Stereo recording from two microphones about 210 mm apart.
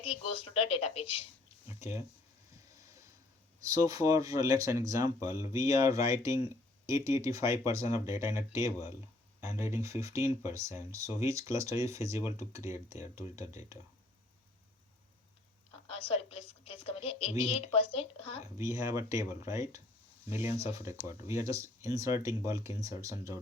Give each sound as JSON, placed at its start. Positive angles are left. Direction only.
{"t": 0.0, "sound": "a woman's voice", "side_deg": 25}
{"t": 1.8, "sound": "speech", "side_deg": -10}
{"t": 3.7, "sound": "speech", "side_deg": -15}
{"t": 15.9, "sound": "a woman's voice", "side_deg": 25}
{"t": 18.5, "sound": "speech", "side_deg": -15}